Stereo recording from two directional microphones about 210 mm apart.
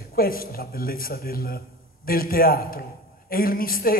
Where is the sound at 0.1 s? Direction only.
45° left (ahead or behind).